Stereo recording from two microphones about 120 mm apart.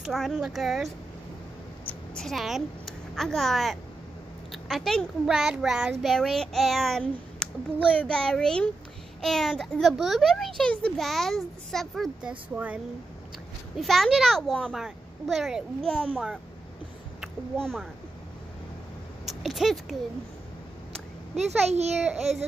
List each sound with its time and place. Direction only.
0.0 s a child's voice: 5° right (ahead or behind)
1.9 s a woman's voice: 5° left (ahead or behind)
13.7 s a child's voice: centre (ahead or behind)
17.6 s a child's voice: 5° left (ahead or behind)
19.2 s speech: centre (ahead or behind)
21.4 s a child's voice: 65° right (ahead or behind)
22.0 s a child's voice: centre (ahead or behind)